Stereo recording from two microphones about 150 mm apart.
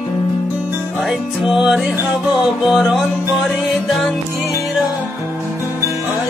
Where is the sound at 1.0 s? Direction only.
Centre (ahead or behind).